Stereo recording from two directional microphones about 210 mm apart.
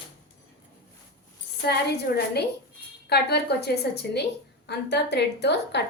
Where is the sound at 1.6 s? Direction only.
50° left (ahead or behind).